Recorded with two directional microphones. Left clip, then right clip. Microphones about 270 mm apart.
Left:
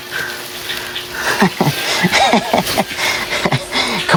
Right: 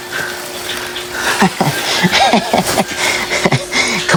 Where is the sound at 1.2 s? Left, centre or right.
Centre.